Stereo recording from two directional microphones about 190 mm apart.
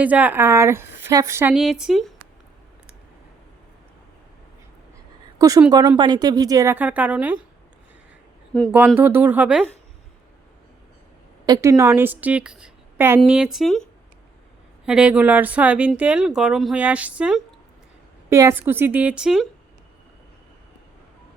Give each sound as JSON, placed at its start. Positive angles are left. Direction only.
{"t": 0.0, "sound": "speech", "side_deg": -10}
{"t": 1.5, "sound": "speech", "side_deg": -5}
{"t": 5.4, "sound": "a woman's voice", "side_deg": -20}
{"t": 9.0, "sound": "speech", "side_deg": -10}
{"t": 11.4, "sound": "speech", "side_deg": -20}
{"t": 14.8, "sound": "speech", "side_deg": -5}